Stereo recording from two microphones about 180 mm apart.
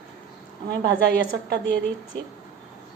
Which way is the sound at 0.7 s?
65° right (ahead or behind).